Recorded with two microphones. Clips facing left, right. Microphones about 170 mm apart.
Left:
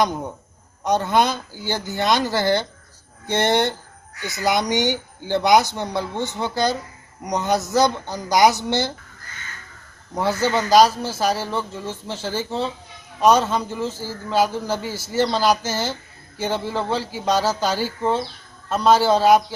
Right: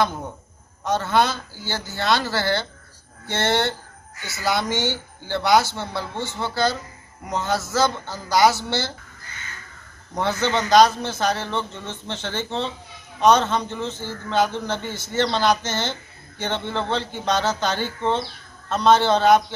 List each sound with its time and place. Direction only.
0.8 s speech: 15° left (ahead or behind)
10.1 s a man's voice: 5° left (ahead or behind)